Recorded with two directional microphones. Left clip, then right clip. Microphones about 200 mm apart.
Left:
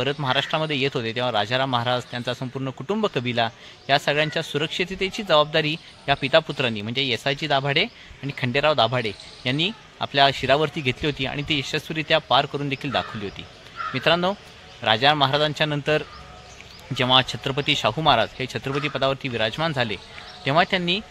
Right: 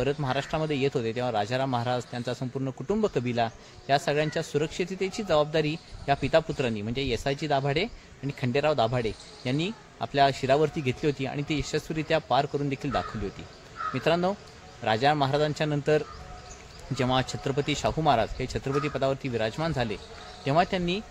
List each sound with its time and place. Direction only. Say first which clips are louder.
0.0 s speech: left 5 dB; 15° left (ahead or behind)